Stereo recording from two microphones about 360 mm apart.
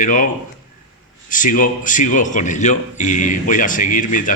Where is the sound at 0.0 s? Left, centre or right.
Left.